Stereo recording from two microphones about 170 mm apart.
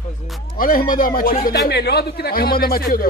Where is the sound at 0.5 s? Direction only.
55° left (ahead or behind).